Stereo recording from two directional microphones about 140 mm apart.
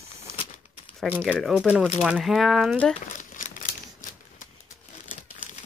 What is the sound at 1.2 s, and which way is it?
Speech, centre (ahead or behind).